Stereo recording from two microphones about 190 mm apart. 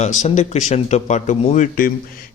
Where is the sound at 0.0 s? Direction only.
40° left (ahead or behind).